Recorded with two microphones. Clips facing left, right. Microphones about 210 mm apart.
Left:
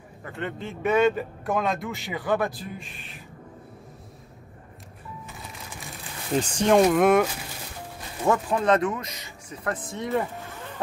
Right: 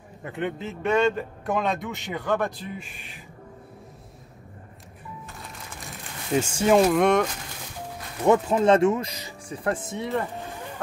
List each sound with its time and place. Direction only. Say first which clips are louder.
0.5 s speech: left 1 dB; centre (ahead or behind)
5.3 s music: even; centre (ahead or behind)
6.3 s speech: even; 5° right (ahead or behind)
8.3 s speech: right 3 dB; 25° right (ahead or behind)
9.8 s speech: left 1 dB; centre (ahead or behind)